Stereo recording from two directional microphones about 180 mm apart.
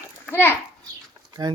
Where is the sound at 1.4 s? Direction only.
25° right (ahead or behind).